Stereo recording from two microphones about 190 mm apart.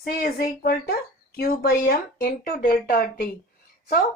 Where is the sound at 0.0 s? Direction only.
50° left (ahead or behind).